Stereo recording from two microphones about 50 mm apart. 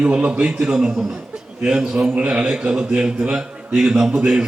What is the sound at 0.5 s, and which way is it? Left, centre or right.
A man's voice, centre.